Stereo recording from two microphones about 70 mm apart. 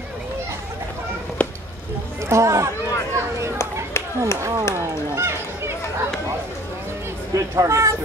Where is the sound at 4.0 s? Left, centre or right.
Left.